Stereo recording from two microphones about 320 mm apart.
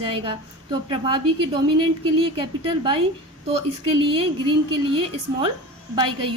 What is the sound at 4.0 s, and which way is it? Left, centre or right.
A woman's voice, centre.